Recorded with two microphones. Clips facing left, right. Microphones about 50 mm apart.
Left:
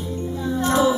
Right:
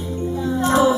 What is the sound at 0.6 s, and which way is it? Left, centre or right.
Music, centre.